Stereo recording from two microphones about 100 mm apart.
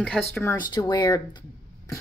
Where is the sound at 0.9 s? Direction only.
45° left (ahead or behind).